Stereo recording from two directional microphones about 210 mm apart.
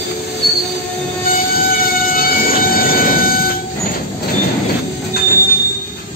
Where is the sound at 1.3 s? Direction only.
45° left (ahead or behind).